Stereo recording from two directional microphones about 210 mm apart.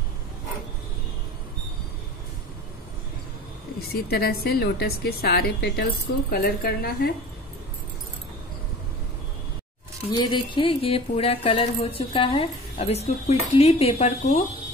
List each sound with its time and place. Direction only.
3.9 s a woman's voice: 45° left (ahead or behind)
10.1 s speech: 20° left (ahead or behind)